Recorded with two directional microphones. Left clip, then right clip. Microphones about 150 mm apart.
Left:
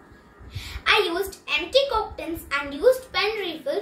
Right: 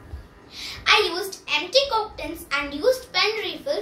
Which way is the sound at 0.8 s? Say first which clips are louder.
Right 1 dB; 60° left (ahead or behind).